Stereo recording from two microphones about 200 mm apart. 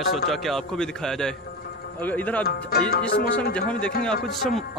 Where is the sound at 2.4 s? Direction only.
50° left (ahead or behind).